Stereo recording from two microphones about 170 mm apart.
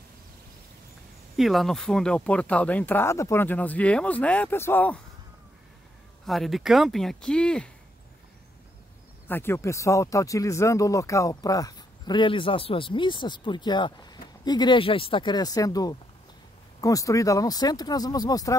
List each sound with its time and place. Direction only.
1.3 s speech: centre (ahead or behind)
6.2 s speech: centre (ahead or behind)
9.3 s speech: 15° left (ahead or behind)